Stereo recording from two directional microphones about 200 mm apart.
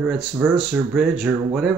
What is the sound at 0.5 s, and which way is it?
Speech, centre (ahead or behind).